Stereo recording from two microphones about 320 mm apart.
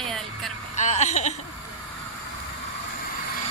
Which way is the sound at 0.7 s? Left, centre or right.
Left.